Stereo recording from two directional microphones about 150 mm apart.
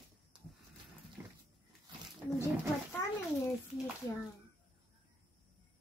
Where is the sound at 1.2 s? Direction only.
20° right (ahead or behind).